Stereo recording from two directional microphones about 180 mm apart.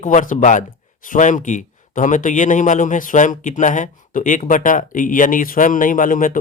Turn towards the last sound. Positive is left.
turn(degrees=50)  # may be behind; listen again after turning